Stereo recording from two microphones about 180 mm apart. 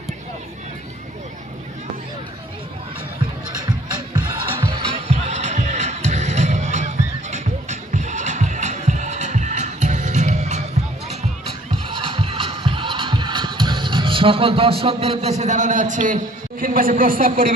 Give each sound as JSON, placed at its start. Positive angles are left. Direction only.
{"t": 4.6, "sound": "music", "side_deg": -30}